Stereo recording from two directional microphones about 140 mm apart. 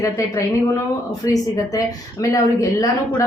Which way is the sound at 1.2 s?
25° left (ahead or behind).